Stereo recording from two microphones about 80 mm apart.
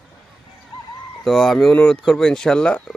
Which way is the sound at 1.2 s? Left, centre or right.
Centre.